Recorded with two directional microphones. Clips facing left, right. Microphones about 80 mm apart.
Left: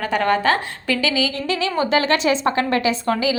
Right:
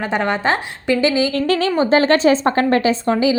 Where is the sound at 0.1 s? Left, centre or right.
Right.